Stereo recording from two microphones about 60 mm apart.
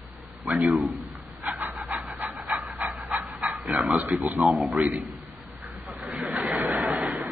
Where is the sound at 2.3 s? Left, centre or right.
Centre.